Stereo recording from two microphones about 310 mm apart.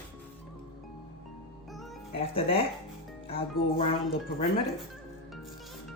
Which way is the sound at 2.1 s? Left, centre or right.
Centre.